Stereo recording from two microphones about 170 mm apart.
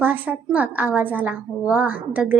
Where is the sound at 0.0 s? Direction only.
10° right (ahead or behind).